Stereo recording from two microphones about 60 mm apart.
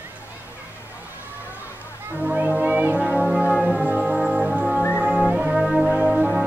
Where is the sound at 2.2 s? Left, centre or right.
Right.